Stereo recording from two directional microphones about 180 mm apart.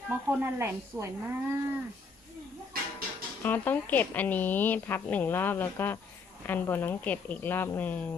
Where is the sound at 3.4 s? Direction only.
10° left (ahead or behind).